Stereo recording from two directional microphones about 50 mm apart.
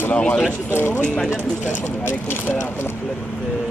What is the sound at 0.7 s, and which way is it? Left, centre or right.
Speech, left.